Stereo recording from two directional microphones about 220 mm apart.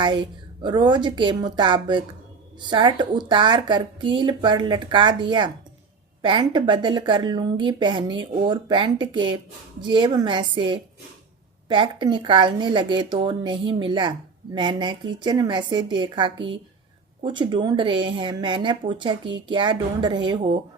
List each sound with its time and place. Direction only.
0.0 s speech: 20° right (ahead or behind)